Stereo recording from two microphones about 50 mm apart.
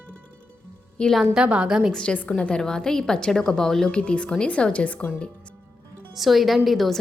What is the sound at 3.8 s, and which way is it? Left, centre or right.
Speech, centre.